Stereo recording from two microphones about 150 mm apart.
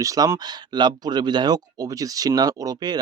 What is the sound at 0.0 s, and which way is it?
Speech, 20° right (ahead or behind).